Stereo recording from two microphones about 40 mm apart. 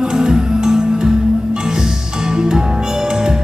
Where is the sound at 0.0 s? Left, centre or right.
Centre.